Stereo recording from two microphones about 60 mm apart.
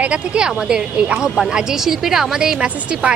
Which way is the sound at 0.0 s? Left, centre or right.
Centre.